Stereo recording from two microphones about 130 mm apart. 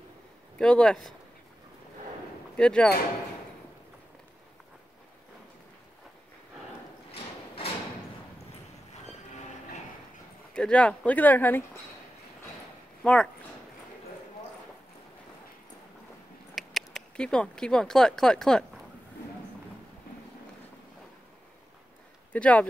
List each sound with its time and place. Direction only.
0.6 s speech: 5° left (ahead or behind)
2.5 s speech: 5° left (ahead or behind)
7.1 s a sound: 45° left (ahead or behind)
10.5 s speech: 10° left (ahead or behind)
13.0 s speech: 10° left (ahead or behind)
16.5 s speech: centre (ahead or behind)
22.3 s speech: 10° left (ahead or behind)